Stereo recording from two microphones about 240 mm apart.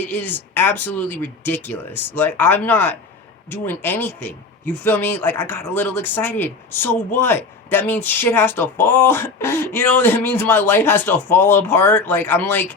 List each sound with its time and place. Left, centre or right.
0.1 s speech: centre